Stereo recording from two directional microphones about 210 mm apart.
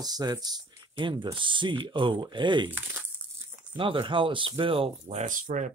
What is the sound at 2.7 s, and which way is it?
Speech, 10° right (ahead or behind).